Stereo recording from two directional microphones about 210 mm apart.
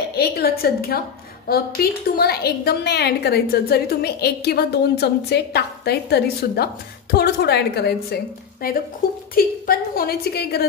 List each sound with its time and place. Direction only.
0.1 s a woman's voice: 50° left (ahead or behind)
9.3 s a woman's voice: 45° left (ahead or behind)